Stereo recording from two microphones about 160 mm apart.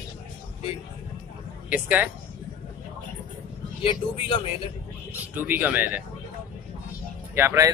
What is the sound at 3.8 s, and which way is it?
Speech, 35° left (ahead or behind).